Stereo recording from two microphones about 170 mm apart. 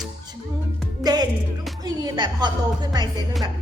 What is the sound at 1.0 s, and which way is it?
Music, 25° right (ahead or behind).